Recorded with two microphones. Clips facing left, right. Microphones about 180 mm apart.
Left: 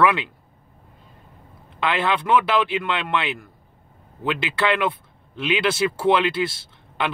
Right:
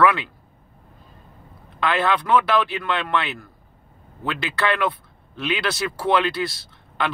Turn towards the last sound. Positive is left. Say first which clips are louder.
# even
turn(degrees=25)  # may be behind; listen again after turning